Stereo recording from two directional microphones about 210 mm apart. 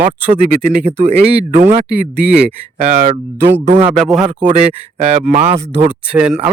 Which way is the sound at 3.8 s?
Centre (ahead or behind).